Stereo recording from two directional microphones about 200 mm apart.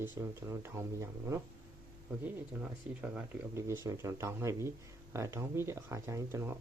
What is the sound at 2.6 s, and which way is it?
Speech, 5° right (ahead or behind).